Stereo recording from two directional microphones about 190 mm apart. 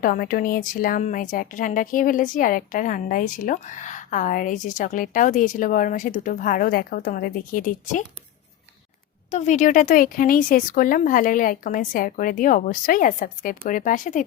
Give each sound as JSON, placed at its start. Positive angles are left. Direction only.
{"t": 0.0, "sound": "speech", "side_deg": 45}
{"t": 9.3, "sound": "speech", "side_deg": 40}